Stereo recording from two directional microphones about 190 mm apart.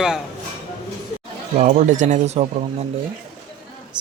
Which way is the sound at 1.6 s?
40° right (ahead or behind).